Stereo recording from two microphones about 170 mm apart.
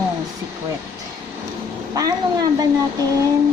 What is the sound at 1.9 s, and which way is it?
Cat, 20° right (ahead or behind).